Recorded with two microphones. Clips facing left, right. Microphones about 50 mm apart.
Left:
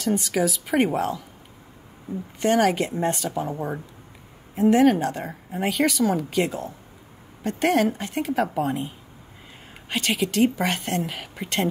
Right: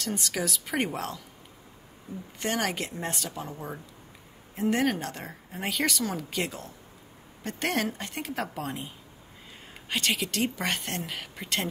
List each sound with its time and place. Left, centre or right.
0.0 s speech: centre
2.4 s speech: centre
3.5 s speech: left
4.6 s speech: centre